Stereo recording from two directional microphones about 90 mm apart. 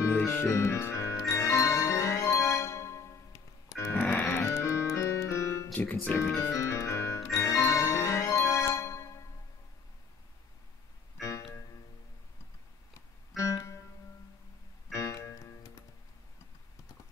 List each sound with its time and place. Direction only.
0.0 s music: 25° left (ahead or behind)
4.0 s music: 15° left (ahead or behind)
4.3 s music: 30° left (ahead or behind)
5.7 s speech: 20° left (ahead or behind)
6.1 s music: 30° left (ahead or behind)
11.1 s music: 35° left (ahead or behind)
13.4 s music: 35° left (ahead or behind)
14.9 s music: 35° left (ahead or behind)